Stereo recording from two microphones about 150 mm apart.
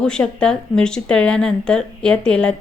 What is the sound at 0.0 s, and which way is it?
A woman's voice, 5° left (ahead or behind).